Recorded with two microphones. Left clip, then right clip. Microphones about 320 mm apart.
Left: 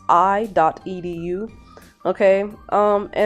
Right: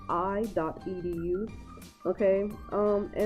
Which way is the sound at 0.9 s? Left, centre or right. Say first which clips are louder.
Left 6 dB; left.